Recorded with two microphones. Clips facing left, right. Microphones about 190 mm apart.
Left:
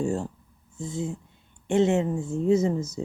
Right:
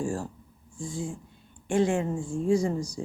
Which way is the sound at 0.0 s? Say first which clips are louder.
Left 4 dB; 20° left (ahead or behind).